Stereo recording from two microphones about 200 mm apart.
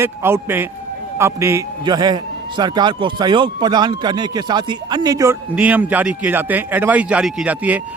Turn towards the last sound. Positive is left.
turn(degrees=-5)  # may be behind; listen again after turning